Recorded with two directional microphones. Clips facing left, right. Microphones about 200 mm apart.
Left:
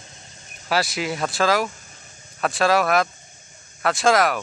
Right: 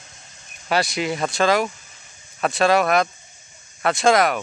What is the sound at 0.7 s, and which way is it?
Speech, centre (ahead or behind).